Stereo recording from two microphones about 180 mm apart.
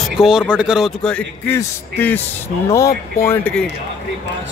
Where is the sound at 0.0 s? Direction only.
5° right (ahead or behind).